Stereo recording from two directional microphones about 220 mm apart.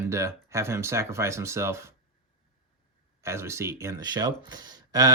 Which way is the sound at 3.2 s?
10° right (ahead or behind).